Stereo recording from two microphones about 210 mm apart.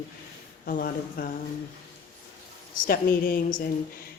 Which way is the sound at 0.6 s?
45° left (ahead or behind).